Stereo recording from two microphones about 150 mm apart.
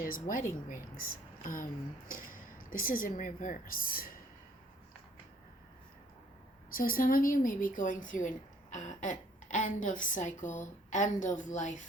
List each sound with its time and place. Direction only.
0.0 s a woman's voice: 70° left (ahead or behind)
6.7 s a woman's voice: 70° left (ahead or behind); by 11.8 s 55° left (ahead or behind)